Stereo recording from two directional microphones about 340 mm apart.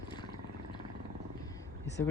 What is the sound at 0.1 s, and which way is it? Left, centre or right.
Vehicle, centre.